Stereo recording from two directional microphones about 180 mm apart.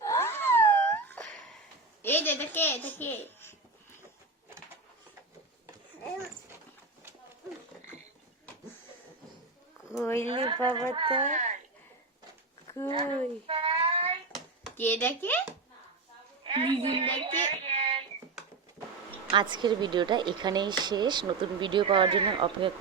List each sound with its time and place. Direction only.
0.0 s wail: 15° left (ahead or behind)
2.0 s a child's voice: 10° left (ahead or behind)
9.9 s speech: 15° left (ahead or behind)
10.2 s a woman's voice: 30° right (ahead or behind)
11.3 s speech: 40° right (ahead or behind)
12.9 s a sound: 30° right (ahead or behind)
14.8 s speech: 10° left (ahead or behind)
16.4 s speech: 30° right (ahead or behind)
19.3 s a woman's voice: 25° right (ahead or behind)